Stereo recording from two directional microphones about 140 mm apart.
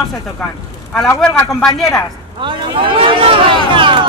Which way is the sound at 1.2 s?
5° left (ahead or behind).